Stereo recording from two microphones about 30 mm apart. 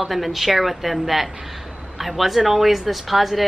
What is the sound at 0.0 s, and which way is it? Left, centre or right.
Speech, centre.